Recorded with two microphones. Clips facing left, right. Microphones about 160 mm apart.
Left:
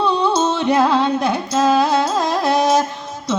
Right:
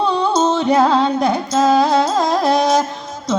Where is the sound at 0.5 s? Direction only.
40° right (ahead or behind).